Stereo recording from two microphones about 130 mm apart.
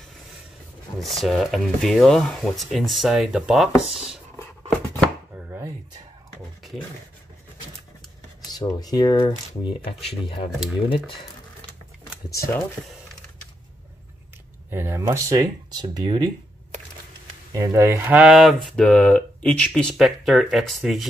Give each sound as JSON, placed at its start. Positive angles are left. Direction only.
{"t": 0.9, "sound": "speech", "side_deg": 0}
{"t": 5.3, "sound": "chopping", "side_deg": -15}
{"t": 8.5, "sound": "speech", "side_deg": 30}
{"t": 12.3, "sound": "speech", "side_deg": 20}
{"t": 14.7, "sound": "speech", "side_deg": -20}
{"t": 17.5, "sound": "speech", "side_deg": -25}